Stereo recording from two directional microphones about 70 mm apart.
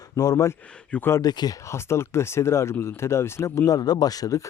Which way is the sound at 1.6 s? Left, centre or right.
Left.